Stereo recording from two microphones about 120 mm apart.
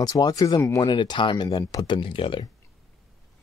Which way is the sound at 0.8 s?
40° left (ahead or behind).